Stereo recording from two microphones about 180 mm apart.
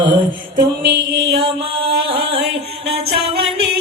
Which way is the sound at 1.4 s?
30° right (ahead or behind).